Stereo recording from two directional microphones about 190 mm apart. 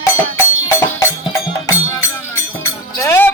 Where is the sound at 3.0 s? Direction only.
10° left (ahead or behind).